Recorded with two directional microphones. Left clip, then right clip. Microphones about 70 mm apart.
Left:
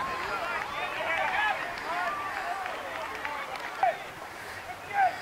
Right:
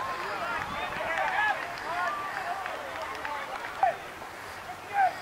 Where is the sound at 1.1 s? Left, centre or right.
Centre.